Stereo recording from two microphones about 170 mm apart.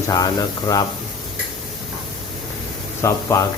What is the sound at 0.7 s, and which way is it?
Speech, 25° left (ahead or behind).